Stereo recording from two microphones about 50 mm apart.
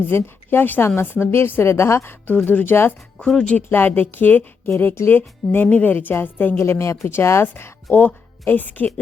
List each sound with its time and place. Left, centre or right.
0.0 s a woman's voice: left
0.8 s speech: left
1.0 s a woman's voice: left
2.0 s a woman's voice: left
3.2 s speech: centre
3.7 s a woman's voice: left
6.6 s speech: left
7.1 s speech: left
7.9 s a woman's voice: left